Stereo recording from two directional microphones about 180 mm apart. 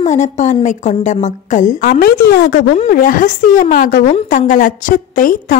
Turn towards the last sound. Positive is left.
turn(degrees=50)  # may be behind; listen again after turning